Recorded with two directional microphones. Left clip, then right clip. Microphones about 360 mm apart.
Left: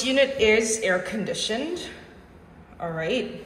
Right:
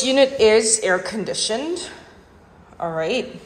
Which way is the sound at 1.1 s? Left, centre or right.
Right.